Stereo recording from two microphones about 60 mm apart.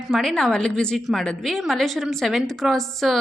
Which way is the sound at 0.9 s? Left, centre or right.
Centre.